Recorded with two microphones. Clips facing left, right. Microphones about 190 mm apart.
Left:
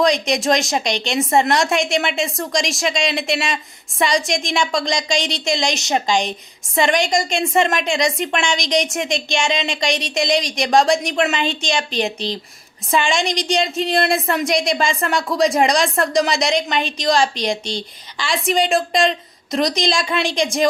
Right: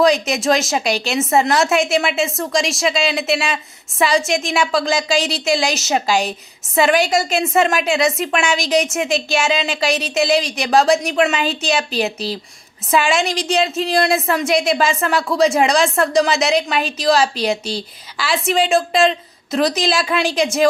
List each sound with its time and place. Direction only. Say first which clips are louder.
0.0 s a woman's voice: right 2 dB; 5° right (ahead or behind)